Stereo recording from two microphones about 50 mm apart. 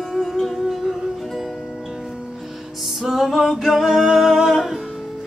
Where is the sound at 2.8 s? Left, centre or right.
Centre.